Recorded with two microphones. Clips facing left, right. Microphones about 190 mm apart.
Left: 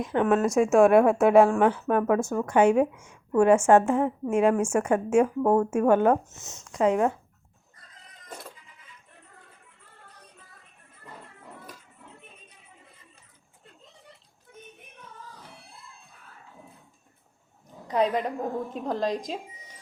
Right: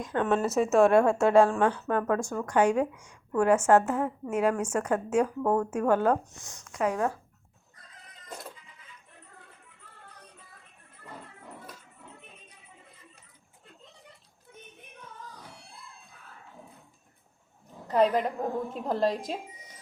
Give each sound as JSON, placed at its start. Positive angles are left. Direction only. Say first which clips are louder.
{"t": 0.0, "sound": "a woman's voice", "louder": "left 4 dB", "side_deg": 20}
{"t": 17.9, "sound": "a woman's voice", "louder": "right 1 dB", "side_deg": 0}